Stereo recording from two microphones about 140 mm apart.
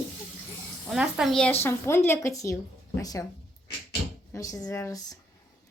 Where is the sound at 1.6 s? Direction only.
15° left (ahead or behind).